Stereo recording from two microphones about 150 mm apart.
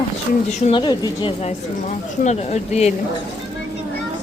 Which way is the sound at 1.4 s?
50° left (ahead or behind).